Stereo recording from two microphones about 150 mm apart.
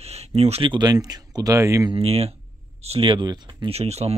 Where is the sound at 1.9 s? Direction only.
40° right (ahead or behind).